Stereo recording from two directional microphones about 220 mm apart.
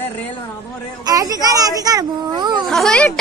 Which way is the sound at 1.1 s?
15° right (ahead or behind).